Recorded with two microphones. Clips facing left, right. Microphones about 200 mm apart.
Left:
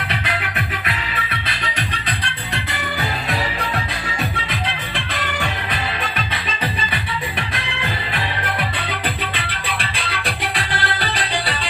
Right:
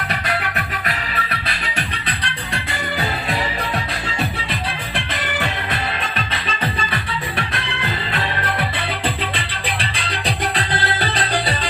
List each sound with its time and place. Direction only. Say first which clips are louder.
0.1 s music: right 2 dB; 45° right (ahead or behind)
9.0 s music: right 2 dB; 30° right (ahead or behind)
10.7 s music: right 2 dB; 20° right (ahead or behind)